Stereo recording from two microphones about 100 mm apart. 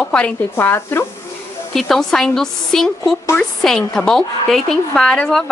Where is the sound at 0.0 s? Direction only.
10° left (ahead or behind).